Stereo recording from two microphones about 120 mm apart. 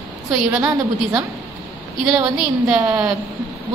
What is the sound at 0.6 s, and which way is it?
Speech, 30° right (ahead or behind).